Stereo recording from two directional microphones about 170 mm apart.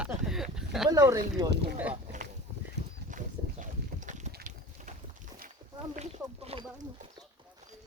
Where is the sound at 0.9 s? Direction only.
20° right (ahead or behind).